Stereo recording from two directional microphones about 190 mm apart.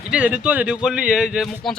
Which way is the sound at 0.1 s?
5° right (ahead or behind).